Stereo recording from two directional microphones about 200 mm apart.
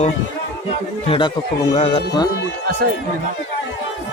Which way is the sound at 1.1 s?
25° left (ahead or behind).